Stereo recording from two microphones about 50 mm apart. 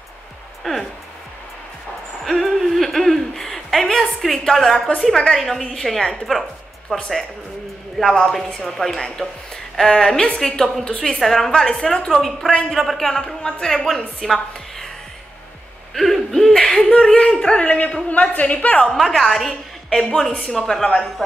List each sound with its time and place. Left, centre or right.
0.7 s a woman's voice: centre
2.2 s a sound: centre
5.0 s a woman's voice: centre
6.9 s a woman's voice: centre
11.1 s speech: centre
12.1 s a woman's voice: centre
15.9 s hoot: centre
16.5 s a sound: centre
17.3 s speech: centre
17.6 s a woman's voice: left
18.9 s a woman's voice: centre